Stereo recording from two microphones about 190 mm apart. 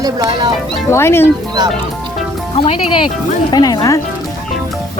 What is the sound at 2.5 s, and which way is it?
Speech, 30° left (ahead or behind).